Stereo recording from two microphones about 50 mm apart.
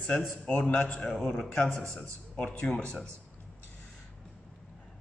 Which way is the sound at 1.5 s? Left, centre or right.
Left.